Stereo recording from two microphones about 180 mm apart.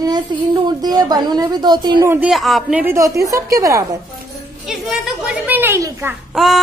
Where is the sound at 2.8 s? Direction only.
15° right (ahead or behind).